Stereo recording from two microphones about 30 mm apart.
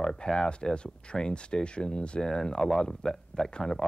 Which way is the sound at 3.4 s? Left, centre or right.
Left.